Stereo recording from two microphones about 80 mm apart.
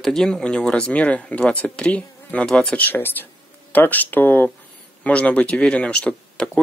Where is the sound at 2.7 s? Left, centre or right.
Left.